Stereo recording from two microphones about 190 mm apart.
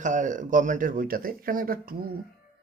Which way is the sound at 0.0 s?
40° right (ahead or behind).